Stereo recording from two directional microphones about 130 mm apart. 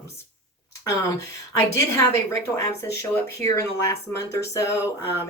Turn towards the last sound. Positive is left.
turn(degrees=25)  # may be behind; listen again after turning